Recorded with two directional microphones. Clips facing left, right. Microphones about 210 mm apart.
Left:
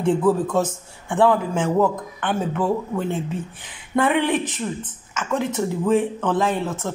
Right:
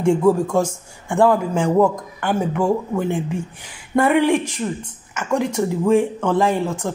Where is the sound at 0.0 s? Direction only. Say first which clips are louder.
Right 3 dB; 10° right (ahead or behind).